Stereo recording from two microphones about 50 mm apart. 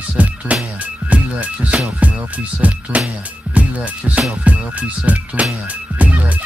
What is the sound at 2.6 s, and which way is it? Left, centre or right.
Speech, right.